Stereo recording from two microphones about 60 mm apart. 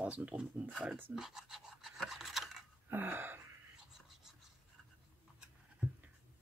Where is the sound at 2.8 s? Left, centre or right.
Right.